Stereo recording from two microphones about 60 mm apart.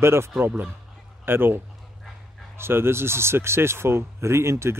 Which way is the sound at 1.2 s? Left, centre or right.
Right.